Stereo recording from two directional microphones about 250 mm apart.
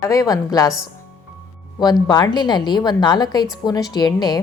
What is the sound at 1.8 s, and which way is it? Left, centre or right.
A woman's voice, centre.